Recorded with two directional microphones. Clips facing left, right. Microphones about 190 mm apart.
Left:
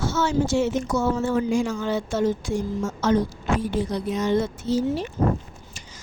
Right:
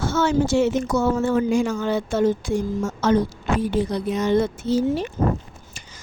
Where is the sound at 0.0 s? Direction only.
55° right (ahead or behind).